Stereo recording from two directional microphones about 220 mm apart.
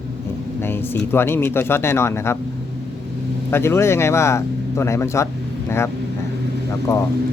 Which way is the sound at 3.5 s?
10° left (ahead or behind).